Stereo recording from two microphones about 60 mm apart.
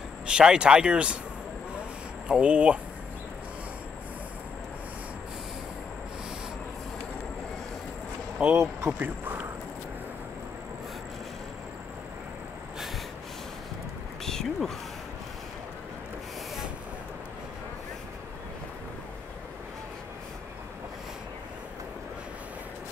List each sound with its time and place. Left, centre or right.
0.3 s speech: centre
2.2 s speech: centre
8.4 s speech: centre
9.0 s speech: right
14.2 s a sound: centre